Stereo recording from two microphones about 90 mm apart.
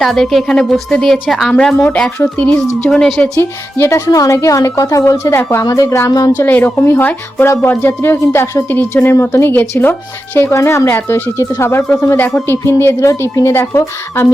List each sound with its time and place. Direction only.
0.0 s a woman's voice: centre (ahead or behind)
3.3 s a woman's voice: 30° left (ahead or behind)
6.3 s a woman's voice: 20° left (ahead or behind)
12.3 s a woman's voice: 30° left (ahead or behind)